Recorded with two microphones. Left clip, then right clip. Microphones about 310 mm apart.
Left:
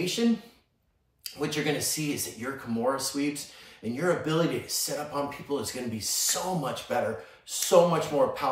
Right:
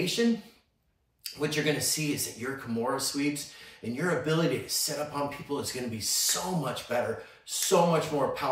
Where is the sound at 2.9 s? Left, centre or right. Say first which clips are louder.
Even; centre.